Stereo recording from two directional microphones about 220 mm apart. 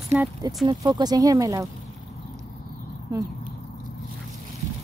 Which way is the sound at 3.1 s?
15° right (ahead or behind).